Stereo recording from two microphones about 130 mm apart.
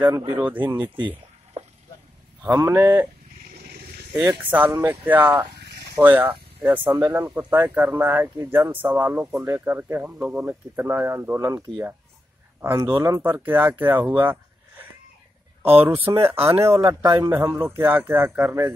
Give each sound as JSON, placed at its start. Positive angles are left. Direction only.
{"t": 0.3, "sound": "speech", "side_deg": -15}
{"t": 0.8, "sound": "a sound", "side_deg": -40}
{"t": 2.4, "sound": "speech", "side_deg": -20}
{"t": 4.1, "sound": "speech", "side_deg": -15}
{"t": 6.8, "sound": "speech", "side_deg": -25}
{"t": 12.9, "sound": "speech", "side_deg": -20}
{"t": 15.6, "sound": "speech", "side_deg": -50}
{"t": 15.9, "sound": "speech", "side_deg": -20}